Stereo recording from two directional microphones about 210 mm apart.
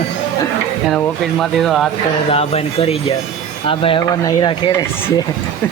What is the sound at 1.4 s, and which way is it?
Speech, centre (ahead or behind).